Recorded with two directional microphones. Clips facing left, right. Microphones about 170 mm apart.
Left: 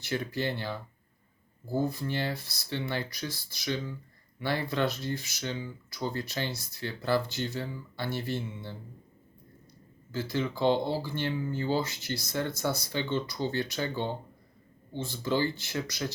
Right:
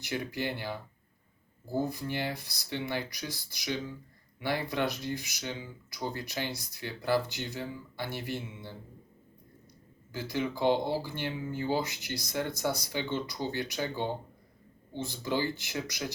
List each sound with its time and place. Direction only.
0.0 s speech: 15° right (ahead or behind)
10.1 s speech: 15° right (ahead or behind)